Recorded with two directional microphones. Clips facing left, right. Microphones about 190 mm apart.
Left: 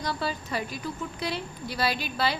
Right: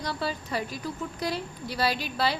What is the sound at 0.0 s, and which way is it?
A woman's voice, 30° right (ahead or behind).